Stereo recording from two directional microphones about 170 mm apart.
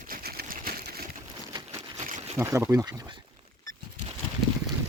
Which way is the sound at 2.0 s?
45° right (ahead or behind).